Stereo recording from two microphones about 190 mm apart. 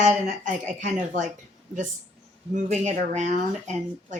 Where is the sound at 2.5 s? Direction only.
40° right (ahead or behind).